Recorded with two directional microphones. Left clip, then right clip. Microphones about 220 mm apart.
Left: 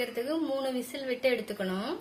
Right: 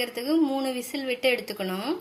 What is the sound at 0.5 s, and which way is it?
Speech, 20° right (ahead or behind).